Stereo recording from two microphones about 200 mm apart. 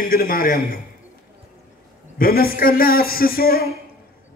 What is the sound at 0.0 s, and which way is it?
Speech, 45° left (ahead or behind).